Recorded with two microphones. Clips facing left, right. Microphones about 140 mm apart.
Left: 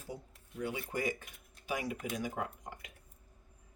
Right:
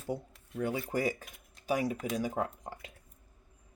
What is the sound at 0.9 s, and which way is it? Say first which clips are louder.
Speech: right 4 dB; 40° right (ahead or behind).